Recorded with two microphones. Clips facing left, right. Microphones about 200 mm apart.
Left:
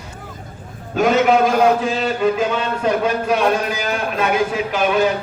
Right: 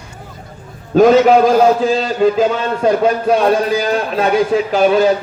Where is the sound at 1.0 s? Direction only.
35° right (ahead or behind).